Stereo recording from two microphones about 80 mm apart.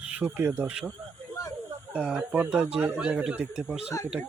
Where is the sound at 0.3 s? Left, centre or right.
Right.